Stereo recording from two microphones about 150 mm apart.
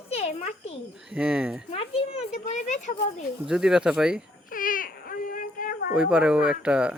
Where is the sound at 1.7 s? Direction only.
40° left (ahead or behind).